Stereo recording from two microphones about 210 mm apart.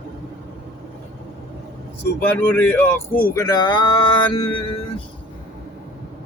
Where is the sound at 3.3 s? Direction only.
20° left (ahead or behind).